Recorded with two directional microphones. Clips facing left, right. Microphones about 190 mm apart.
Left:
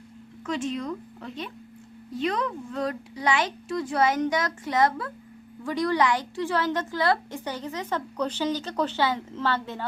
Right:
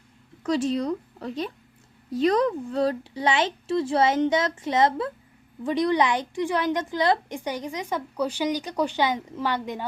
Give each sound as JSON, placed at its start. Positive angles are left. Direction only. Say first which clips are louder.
{"t": 0.4, "sound": "a woman's voice", "louder": "right 5 dB", "side_deg": -35}